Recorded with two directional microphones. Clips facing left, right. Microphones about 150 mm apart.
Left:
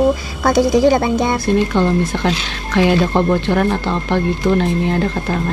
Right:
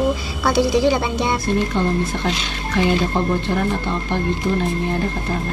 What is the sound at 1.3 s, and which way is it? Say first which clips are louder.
Speech: left 5 dB; 85° left.